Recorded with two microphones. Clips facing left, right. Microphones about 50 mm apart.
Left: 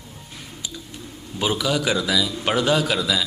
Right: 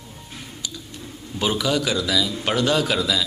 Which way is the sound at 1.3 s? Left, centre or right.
Centre.